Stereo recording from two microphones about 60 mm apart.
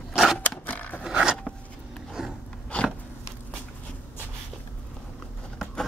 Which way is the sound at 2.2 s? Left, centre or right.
Centre.